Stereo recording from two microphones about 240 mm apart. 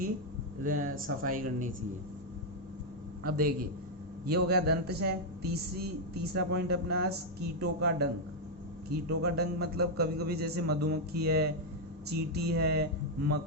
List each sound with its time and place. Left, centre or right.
0.6 s a man's voice: right
3.2 s a man's voice: right